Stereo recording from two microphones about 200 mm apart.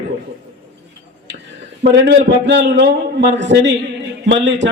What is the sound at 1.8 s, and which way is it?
Speech, 60° right (ahead or behind).